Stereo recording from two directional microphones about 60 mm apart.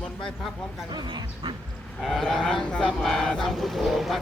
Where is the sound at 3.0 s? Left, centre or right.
Centre.